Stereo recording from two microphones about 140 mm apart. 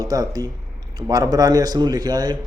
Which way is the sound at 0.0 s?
25° right (ahead or behind).